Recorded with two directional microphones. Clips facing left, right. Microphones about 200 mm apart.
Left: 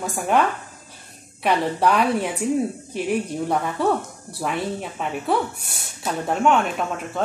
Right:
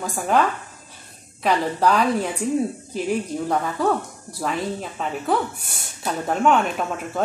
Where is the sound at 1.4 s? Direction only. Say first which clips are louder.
Even; 5° left (ahead or behind).